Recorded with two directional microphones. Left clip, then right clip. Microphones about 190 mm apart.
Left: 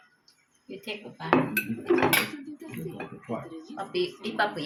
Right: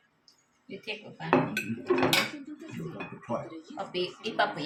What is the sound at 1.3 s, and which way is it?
Dishes, 25° left (ahead or behind).